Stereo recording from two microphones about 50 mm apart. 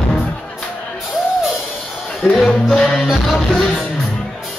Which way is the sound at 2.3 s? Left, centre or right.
Centre.